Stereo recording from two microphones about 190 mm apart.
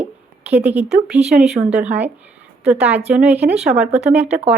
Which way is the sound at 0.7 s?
35° right (ahead or behind).